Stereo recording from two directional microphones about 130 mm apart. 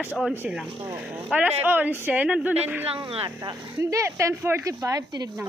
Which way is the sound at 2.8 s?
45° right (ahead or behind).